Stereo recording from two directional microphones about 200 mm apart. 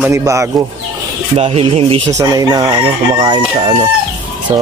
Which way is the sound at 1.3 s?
30° right (ahead or behind).